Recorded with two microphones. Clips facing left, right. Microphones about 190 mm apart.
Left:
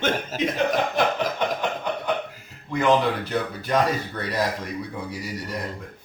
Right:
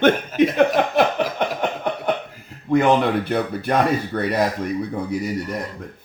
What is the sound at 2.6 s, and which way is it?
Speech, 55° right (ahead or behind).